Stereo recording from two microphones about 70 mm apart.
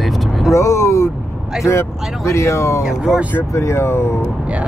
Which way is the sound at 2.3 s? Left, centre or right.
Left.